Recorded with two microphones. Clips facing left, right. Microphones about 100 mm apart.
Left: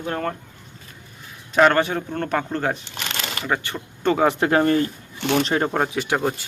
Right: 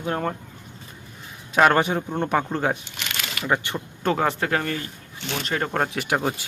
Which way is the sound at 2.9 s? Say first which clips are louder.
Left 3 dB; 35° left (ahead or behind).